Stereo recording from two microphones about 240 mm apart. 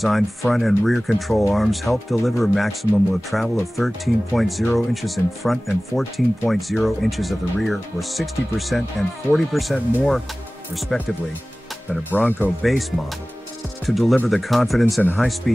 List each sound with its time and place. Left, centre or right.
0.0 s speech: centre
13.8 s speech: centre